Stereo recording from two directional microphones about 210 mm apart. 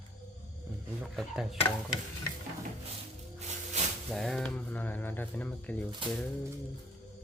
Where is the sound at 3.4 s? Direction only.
35° right (ahead or behind).